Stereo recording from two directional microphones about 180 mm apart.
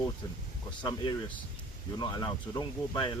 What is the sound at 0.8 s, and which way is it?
Speech, 25° left (ahead or behind).